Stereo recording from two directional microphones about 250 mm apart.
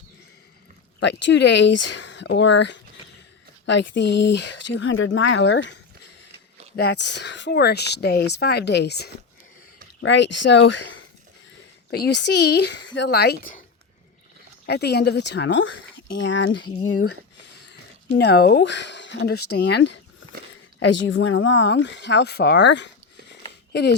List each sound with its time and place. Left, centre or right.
0.9 s speech: left
6.7 s speech: left
11.9 s speech: left
14.7 s speech: left
16.8 s speech: left
18.2 s speech: left